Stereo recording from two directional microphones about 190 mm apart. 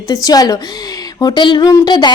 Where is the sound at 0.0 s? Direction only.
20° left (ahead or behind).